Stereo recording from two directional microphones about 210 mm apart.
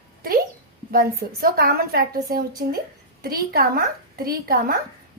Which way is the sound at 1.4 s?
45° right (ahead or behind).